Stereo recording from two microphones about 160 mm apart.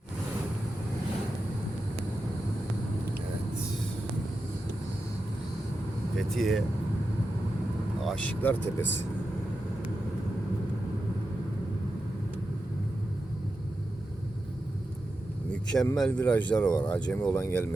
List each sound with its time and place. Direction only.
6.1 s speech: centre (ahead or behind)
8.0 s speech: 10° left (ahead or behind)
15.6 s speech: 5° left (ahead or behind)